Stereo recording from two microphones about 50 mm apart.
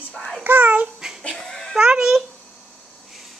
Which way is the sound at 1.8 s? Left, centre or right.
Centre.